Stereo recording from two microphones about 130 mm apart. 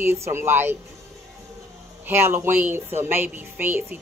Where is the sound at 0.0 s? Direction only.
20° right (ahead or behind).